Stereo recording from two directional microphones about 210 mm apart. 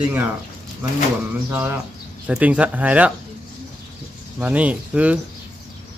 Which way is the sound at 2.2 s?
5° right (ahead or behind).